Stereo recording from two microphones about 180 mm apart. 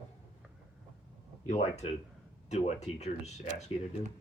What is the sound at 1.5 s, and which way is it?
Speech, 40° left (ahead or behind).